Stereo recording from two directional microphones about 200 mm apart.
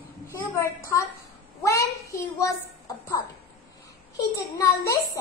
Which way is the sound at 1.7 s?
15° left (ahead or behind).